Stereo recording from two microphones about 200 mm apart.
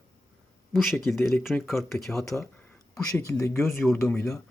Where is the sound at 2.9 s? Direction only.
15° left (ahead or behind).